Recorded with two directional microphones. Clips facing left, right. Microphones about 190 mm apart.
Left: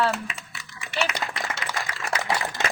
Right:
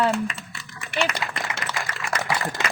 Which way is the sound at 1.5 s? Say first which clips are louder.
Right 1 dB; 45° left (ahead or behind).